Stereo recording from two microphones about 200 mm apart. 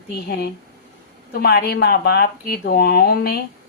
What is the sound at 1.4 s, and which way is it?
Speech, 55° left (ahead or behind).